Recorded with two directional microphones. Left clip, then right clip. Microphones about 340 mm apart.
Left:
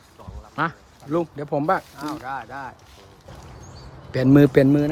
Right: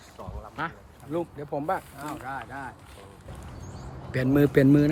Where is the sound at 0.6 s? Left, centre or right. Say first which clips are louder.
Left 9 dB; centre.